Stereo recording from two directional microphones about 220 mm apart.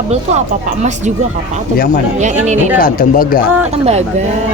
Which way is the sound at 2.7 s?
40° left (ahead or behind).